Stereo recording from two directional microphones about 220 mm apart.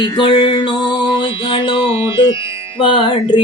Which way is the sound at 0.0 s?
20° left (ahead or behind).